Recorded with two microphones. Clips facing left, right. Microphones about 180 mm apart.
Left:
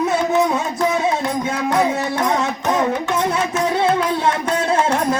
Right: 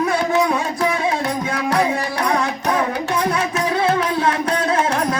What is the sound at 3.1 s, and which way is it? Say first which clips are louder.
Music: left 1 dB; 25° left (ahead or behind).